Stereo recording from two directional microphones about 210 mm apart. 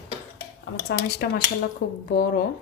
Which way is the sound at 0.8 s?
50° left (ahead or behind).